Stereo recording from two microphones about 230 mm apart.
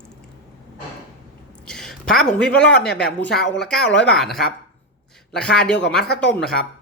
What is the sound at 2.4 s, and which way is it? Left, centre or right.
Speech, centre.